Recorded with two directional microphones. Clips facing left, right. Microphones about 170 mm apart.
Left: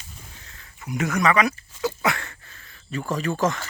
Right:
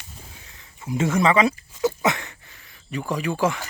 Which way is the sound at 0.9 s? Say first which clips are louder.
Right 2 dB; 25° right (ahead or behind).